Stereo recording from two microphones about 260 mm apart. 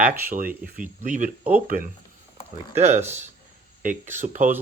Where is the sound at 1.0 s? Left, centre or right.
Right.